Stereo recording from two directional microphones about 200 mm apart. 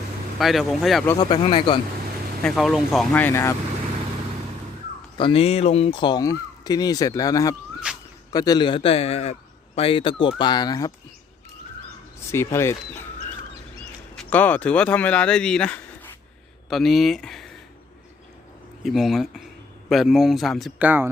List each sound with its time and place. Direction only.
0.3 s speech: centre (ahead or behind)
1.2 s speech: 25° left (ahead or behind)
2.4 s speech: centre (ahead or behind)
5.1 s speech: 25° left (ahead or behind)
7.9 s a sound: 5° right (ahead or behind)
8.3 s speech: 20° left (ahead or behind)
12.3 s speech: 15° left (ahead or behind)
14.2 s speech: 10° left (ahead or behind)
18.8 s speech: centre (ahead or behind)